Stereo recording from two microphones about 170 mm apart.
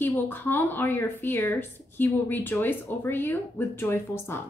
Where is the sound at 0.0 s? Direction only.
10° left (ahead or behind).